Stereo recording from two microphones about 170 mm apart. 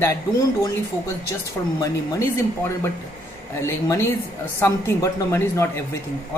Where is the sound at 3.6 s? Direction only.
15° left (ahead or behind).